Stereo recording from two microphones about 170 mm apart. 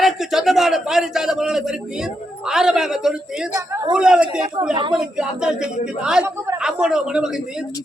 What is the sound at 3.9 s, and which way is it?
A man's voice, 5° right (ahead or behind).